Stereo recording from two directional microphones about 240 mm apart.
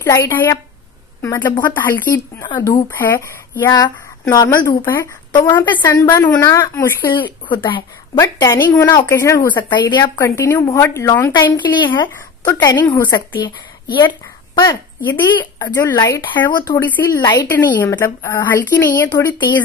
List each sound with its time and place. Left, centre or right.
0.0 s a woman's voice: centre